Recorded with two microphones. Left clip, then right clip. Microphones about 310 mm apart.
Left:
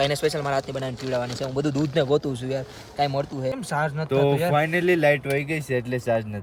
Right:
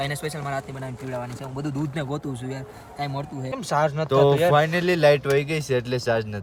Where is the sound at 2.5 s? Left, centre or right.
Centre.